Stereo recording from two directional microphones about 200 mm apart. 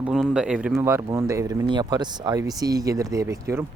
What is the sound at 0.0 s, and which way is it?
Speech, 5° right (ahead or behind).